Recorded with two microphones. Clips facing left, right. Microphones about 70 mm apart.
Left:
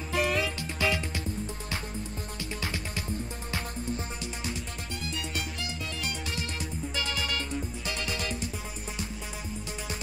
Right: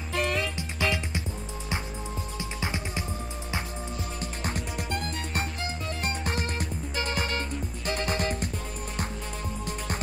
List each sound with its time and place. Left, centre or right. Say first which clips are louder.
0.1 s music: even; centre
0.8 s music: even; centre
4.4 s music: right 4 dB; right